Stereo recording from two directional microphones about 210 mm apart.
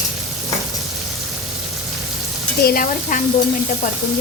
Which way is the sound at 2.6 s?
40° left (ahead or behind).